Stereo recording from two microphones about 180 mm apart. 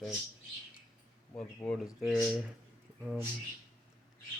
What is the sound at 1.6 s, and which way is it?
Speech, centre (ahead or behind).